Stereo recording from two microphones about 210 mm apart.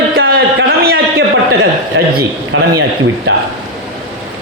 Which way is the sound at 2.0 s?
60° right (ahead or behind).